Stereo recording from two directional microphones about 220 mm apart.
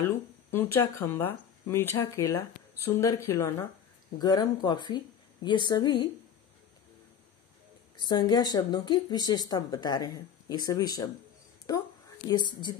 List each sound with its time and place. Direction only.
0.0 s speech: 10° left (ahead or behind)
8.1 s speech: 20° left (ahead or behind)